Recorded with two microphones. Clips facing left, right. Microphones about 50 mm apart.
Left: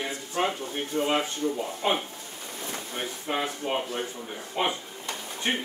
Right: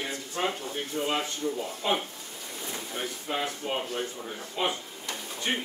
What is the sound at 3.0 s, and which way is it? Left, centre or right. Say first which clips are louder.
Speech: left 2 dB; left.